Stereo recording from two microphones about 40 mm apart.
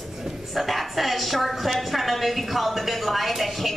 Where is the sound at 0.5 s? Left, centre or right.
Centre.